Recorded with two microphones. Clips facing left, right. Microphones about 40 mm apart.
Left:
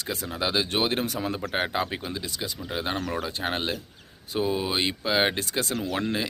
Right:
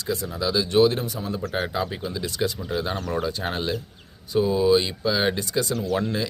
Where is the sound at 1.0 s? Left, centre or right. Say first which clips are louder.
Left 1 dB; left.